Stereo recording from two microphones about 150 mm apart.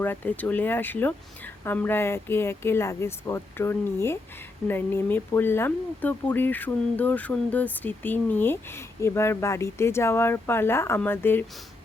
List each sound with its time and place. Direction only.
0.0 s speech: 10° left (ahead or behind)